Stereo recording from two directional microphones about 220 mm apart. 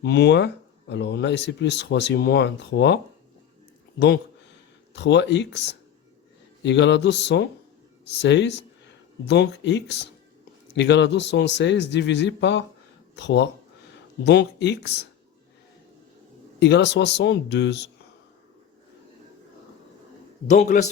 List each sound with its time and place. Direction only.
0.0 s speech: 50° left (ahead or behind)
4.9 s speech: 50° left (ahead or behind)
16.6 s speech: 50° left (ahead or behind)
20.5 s a man's voice: 35° left (ahead or behind)